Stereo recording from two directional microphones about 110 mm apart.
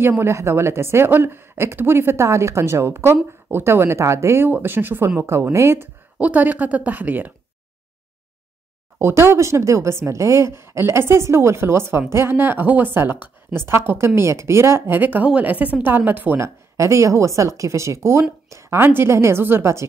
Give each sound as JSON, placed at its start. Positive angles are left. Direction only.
{"t": 0.0, "sound": "a woman's voice", "side_deg": -20}
{"t": 6.1, "sound": "a woman's voice", "side_deg": -15}
{"t": 8.9, "sound": "a woman's voice", "side_deg": -20}